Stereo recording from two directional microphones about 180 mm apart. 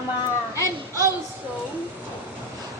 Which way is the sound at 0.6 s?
15° right (ahead or behind).